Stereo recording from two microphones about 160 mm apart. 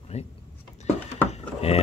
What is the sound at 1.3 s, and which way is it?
Drawer open or close, 40° left (ahead or behind).